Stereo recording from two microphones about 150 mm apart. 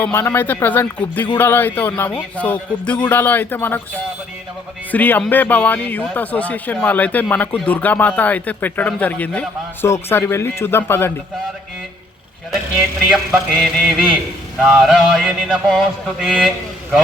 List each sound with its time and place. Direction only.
0.0 s speech: 15° left (ahead or behind)
4.9 s speech: 10° left (ahead or behind)
12.5 s a sound: centre (ahead or behind)